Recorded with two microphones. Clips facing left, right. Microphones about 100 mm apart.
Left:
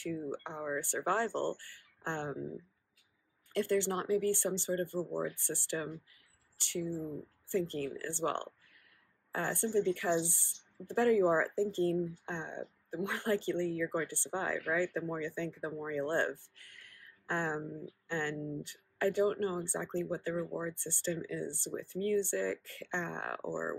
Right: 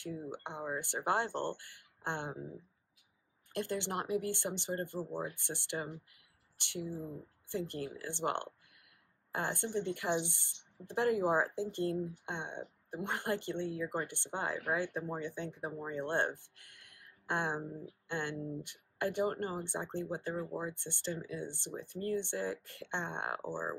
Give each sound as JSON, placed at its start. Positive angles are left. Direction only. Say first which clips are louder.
{"t": 0.0, "sound": "speech", "louder": "left 4 dB", "side_deg": -20}